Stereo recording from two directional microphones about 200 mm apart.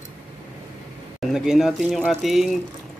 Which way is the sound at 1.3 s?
Centre (ahead or behind).